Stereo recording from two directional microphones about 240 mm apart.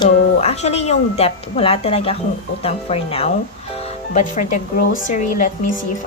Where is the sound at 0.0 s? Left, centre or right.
Left.